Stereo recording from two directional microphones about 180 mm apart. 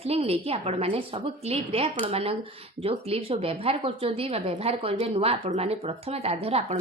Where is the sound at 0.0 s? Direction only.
35° right (ahead or behind).